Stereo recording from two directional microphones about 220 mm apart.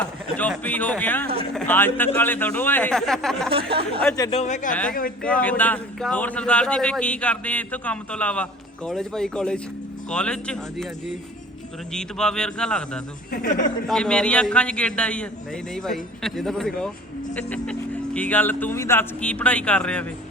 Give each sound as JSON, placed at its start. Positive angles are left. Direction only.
{"t": 0.3, "sound": "speech", "side_deg": 5}
{"t": 3.5, "sound": "speech", "side_deg": -25}
{"t": 4.2, "sound": "speech", "side_deg": 25}
{"t": 4.7, "sound": "speech", "side_deg": 5}
{"t": 11.9, "sound": "speech", "side_deg": 5}
{"t": 13.3, "sound": "speech", "side_deg": 35}
{"t": 13.8, "sound": "speech", "side_deg": 5}